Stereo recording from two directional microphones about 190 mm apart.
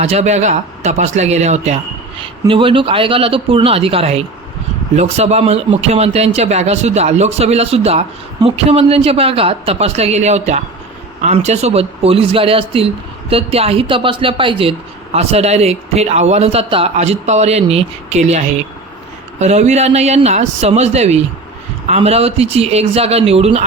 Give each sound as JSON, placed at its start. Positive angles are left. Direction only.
{"t": 0.0, "sound": "a man's voice", "side_deg": -35}